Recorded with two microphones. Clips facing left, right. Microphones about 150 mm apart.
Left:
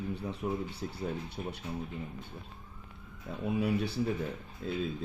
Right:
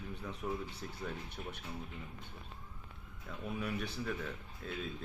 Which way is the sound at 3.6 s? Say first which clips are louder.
Left 9 dB; 30° left (ahead or behind).